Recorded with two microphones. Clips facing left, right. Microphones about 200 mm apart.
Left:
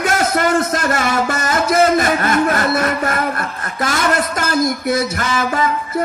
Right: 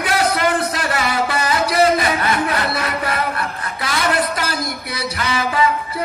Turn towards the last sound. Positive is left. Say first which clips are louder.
# even
turn(degrees=45)  # may be behind; listen again after turning